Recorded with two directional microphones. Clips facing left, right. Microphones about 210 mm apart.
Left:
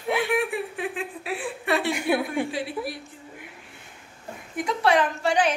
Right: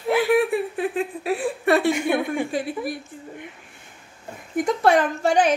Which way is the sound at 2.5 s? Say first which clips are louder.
Right 4 dB; 50° right (ahead or behind).